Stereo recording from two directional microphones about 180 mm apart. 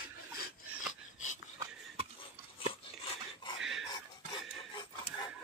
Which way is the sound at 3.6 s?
Centre (ahead or behind).